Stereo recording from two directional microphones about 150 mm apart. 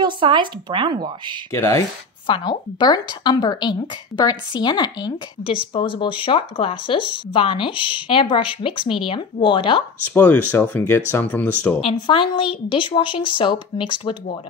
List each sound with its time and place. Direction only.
0.0 s speech: 30° right (ahead or behind)
1.5 s speech: 20° left (ahead or behind)
2.2 s a woman's voice: 35° left (ahead or behind)
10.1 s speech: 10° left (ahead or behind)
11.8 s speech: 35° left (ahead or behind)